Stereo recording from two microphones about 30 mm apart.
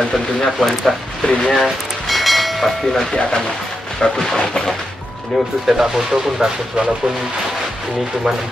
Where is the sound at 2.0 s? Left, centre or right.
Centre.